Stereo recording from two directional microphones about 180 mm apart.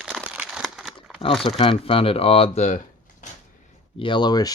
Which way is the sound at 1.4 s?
30° left (ahead or behind).